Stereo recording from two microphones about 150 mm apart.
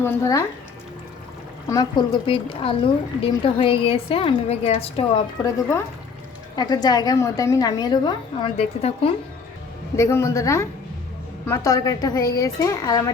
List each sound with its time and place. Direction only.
0.0 s a woman's voice: 20° left (ahead or behind)
1.7 s a woman's voice: 30° left (ahead or behind)
6.6 s a woman's voice: 25° left (ahead or behind)
9.9 s a woman's voice: 20° left (ahead or behind)